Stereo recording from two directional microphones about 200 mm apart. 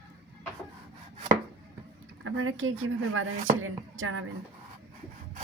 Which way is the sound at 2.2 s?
90° right.